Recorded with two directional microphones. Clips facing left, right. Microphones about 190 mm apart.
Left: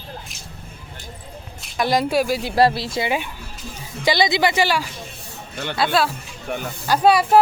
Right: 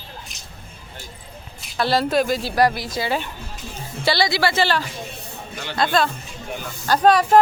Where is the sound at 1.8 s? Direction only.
15° left (ahead or behind).